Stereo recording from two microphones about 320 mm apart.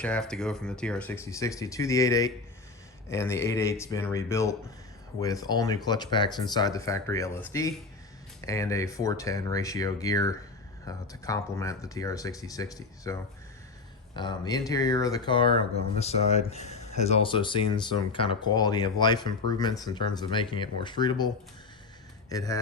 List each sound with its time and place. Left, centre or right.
0.0 s speech: centre
14.2 s speech: centre
22.3 s speech: centre